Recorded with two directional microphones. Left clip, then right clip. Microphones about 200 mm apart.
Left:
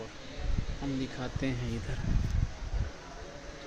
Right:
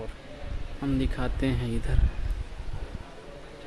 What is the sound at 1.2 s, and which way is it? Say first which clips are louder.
Speech: right 5 dB; 45° right (ahead or behind).